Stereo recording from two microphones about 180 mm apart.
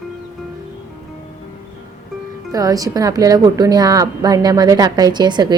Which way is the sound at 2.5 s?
20° right (ahead or behind).